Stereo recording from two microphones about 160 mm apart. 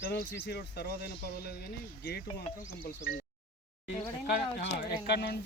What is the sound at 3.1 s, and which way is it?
Speech, 75° left (ahead or behind).